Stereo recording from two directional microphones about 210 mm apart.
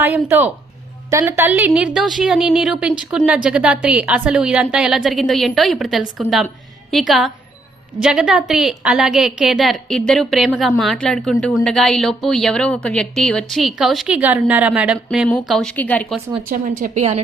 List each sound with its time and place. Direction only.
0.0 s speech: 10° right (ahead or behind)
16.5 s a woman's voice: 40° right (ahead or behind)